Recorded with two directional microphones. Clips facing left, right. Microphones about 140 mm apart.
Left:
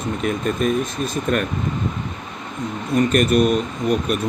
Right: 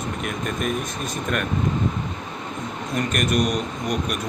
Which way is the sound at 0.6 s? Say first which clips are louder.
Left 5 dB; 35° left (ahead or behind).